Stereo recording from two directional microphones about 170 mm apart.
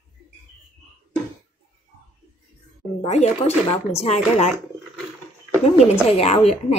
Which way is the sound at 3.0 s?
40° left (ahead or behind).